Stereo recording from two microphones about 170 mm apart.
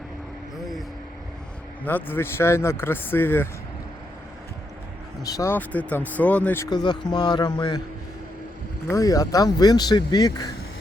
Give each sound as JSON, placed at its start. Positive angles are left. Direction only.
{"t": 1.8, "sound": "speech", "side_deg": 10}
{"t": 5.2, "sound": "speech", "side_deg": 15}
{"t": 6.7, "sound": "speech", "side_deg": 25}
{"t": 8.9, "sound": "speech", "side_deg": 20}